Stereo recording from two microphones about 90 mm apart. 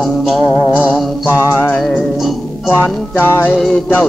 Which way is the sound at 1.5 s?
20° left (ahead or behind).